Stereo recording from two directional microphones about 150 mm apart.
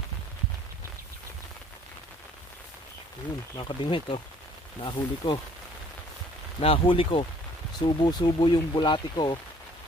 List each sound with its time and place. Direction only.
3.5 s speech: 30° left (ahead or behind)
6.6 s speech: 35° left (ahead or behind)